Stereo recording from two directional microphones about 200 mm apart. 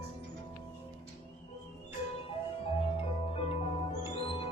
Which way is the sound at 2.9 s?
25° left (ahead or behind).